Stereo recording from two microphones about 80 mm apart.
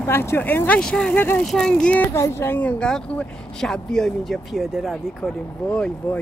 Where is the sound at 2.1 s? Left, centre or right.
Left.